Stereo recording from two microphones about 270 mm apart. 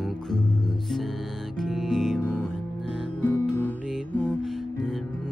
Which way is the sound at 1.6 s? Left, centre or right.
Centre.